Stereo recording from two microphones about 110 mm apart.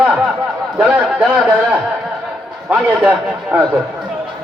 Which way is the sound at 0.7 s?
10° right (ahead or behind).